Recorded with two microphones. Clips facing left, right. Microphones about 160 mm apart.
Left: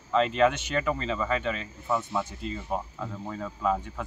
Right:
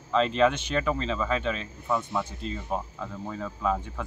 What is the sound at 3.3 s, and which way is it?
Speech, 5° left (ahead or behind).